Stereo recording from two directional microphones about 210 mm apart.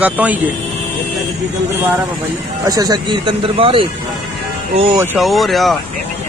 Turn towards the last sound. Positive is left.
turn(degrees=0)  # may be behind; listen again after turning